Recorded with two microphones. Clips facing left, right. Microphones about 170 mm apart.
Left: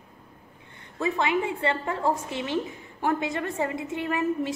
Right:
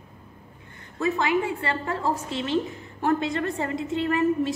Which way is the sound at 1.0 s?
20° left (ahead or behind).